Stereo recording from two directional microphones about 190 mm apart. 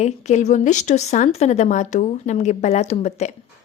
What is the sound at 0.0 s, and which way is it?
A woman's voice, 35° left (ahead or behind).